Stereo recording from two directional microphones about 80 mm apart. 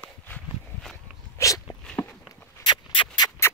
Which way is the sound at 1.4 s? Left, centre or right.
Left.